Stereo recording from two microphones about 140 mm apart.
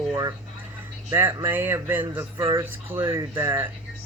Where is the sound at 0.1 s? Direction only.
30° right (ahead or behind).